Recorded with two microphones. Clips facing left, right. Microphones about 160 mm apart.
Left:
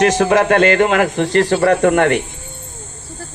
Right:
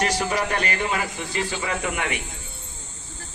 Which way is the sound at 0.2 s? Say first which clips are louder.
Left 12 dB; 90° left.